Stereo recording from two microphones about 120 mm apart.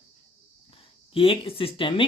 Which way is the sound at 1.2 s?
50° left (ahead or behind).